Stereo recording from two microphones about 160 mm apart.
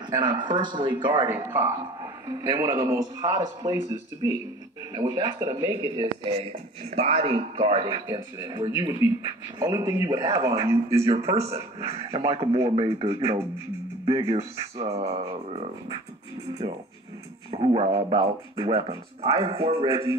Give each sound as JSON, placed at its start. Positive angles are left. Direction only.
{"t": 0.1, "sound": "speech", "side_deg": -30}
{"t": 1.3, "sound": "a man's voice", "side_deg": -15}
{"t": 11.2, "sound": "speech", "side_deg": -40}